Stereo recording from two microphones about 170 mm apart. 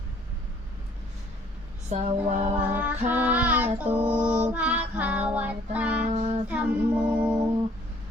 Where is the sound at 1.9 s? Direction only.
40° right (ahead or behind).